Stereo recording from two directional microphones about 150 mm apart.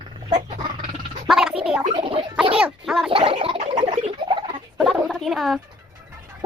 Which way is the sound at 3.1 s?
40° right (ahead or behind).